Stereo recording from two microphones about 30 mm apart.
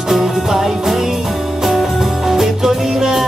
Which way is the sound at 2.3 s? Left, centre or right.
Centre.